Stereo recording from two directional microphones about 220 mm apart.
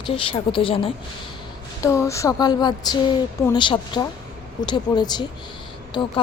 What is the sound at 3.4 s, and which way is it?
A woman's voice, 20° left (ahead or behind).